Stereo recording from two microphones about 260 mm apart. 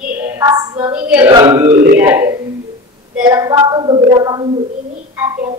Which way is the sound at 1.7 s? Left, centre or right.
Right.